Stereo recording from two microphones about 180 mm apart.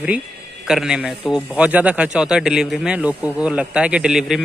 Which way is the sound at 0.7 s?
5° right (ahead or behind).